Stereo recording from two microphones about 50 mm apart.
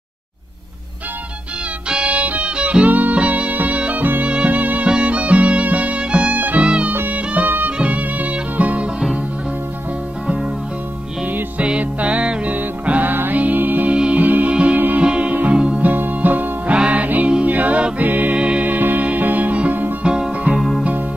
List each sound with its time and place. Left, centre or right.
1.9 s music: right
4.0 s music: right
4.3 s music: right
7.1 s music: right
10.2 s music: right
11.2 s music: right
13.9 s music: right
14.2 s music: right
15.9 s music: right
16.7 s music: right
18.3 s music: right
18.7 s music: right
20.0 s music: centre
20.5 s music: centre